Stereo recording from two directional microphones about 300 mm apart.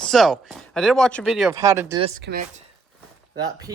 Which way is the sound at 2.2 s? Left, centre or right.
Right.